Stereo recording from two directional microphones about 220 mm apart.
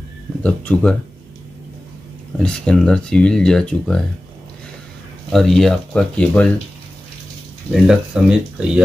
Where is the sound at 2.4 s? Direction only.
5° left (ahead or behind).